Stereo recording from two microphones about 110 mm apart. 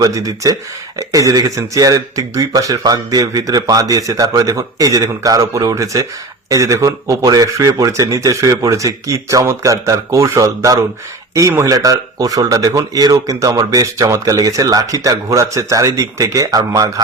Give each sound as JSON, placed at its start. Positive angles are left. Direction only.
{"t": 0.0, "sound": "speech", "side_deg": -30}